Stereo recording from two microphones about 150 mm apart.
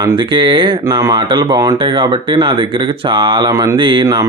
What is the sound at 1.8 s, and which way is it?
Speech, 35° right (ahead or behind).